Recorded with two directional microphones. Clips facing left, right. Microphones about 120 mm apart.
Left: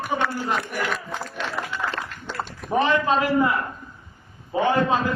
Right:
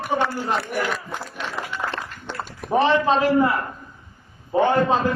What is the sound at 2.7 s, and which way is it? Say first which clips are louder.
Speech: right 3 dB; 30° right (ahead or behind).